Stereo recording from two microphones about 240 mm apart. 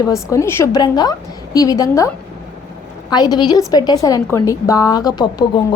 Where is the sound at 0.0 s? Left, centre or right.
Centre.